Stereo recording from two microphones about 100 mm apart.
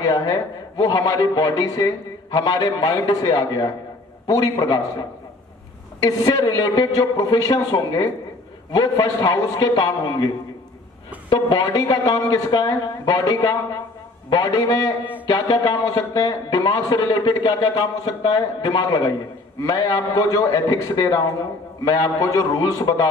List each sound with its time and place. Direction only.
0.0 s a woman's voice: 40° left (ahead or behind)
6.0 s a woman's voice: 40° left (ahead or behind)